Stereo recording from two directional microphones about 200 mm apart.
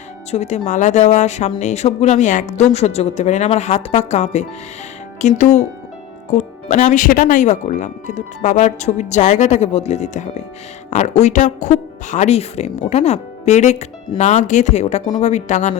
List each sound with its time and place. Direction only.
0.3 s speech: 35° left (ahead or behind)